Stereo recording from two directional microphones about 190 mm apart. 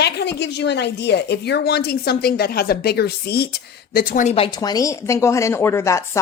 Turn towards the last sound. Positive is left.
turn(degrees=15)  # may be behind; listen again after turning